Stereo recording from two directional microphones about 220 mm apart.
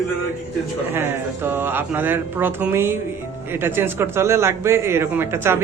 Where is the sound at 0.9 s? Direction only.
10° right (ahead or behind).